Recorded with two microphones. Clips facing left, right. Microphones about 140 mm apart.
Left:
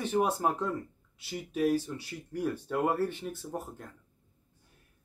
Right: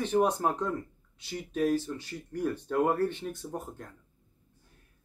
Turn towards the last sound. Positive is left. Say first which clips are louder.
# even
turn(degrees=5)  # may be behind; listen again after turning